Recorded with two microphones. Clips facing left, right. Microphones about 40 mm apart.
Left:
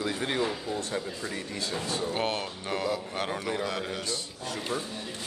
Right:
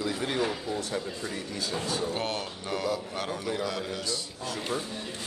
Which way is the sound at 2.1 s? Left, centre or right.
Left.